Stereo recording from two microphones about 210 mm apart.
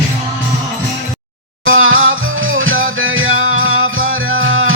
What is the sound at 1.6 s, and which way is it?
Music, 70° right (ahead or behind).